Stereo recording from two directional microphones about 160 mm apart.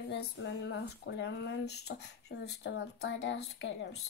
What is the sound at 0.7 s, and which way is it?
Speech, 90° left.